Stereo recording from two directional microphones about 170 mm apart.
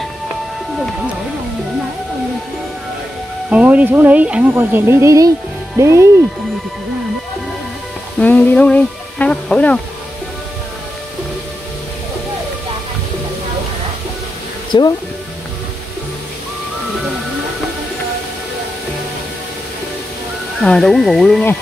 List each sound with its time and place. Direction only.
3.4 s speech: 5° right (ahead or behind)
8.2 s speech: 10° left (ahead or behind)
14.7 s speech: 25° left (ahead or behind)
20.6 s speech: 5° left (ahead or behind)